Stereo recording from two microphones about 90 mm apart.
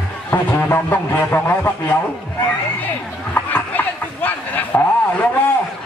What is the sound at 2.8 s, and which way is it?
Chatter, 20° left (ahead or behind).